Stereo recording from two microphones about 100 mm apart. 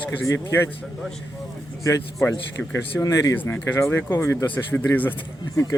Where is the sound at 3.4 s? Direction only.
20° left (ahead or behind).